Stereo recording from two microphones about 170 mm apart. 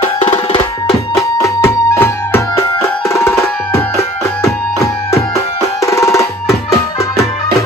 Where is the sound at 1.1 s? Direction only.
15° left (ahead or behind).